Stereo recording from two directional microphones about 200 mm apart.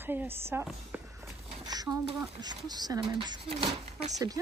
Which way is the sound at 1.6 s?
20° right (ahead or behind).